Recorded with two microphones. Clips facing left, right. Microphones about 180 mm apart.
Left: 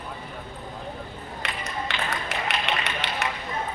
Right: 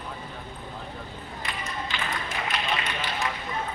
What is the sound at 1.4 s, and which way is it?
Music, 70° left (ahead or behind).